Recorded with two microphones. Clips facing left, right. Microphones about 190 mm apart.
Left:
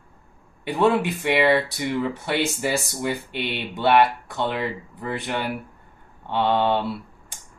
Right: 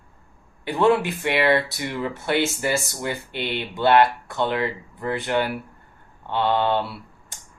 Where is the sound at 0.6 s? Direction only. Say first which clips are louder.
Right 1 dB; 15° left (ahead or behind).